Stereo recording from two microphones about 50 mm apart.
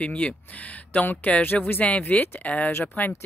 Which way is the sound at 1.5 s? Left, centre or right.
Centre.